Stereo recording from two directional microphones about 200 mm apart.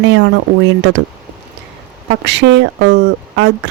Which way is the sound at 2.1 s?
60° right (ahead or behind).